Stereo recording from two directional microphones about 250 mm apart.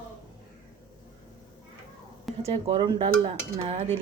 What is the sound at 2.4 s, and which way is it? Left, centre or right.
Speech, right.